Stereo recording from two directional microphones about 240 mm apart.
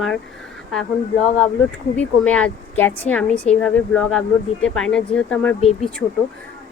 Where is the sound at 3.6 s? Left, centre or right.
Centre.